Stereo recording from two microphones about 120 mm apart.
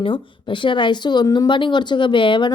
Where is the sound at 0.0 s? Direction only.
45° left (ahead or behind).